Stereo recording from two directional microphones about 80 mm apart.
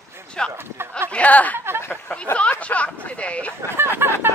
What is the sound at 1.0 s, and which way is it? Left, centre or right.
Speech, centre.